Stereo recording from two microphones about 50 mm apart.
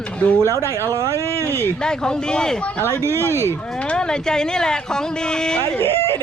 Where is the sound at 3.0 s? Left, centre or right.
Right.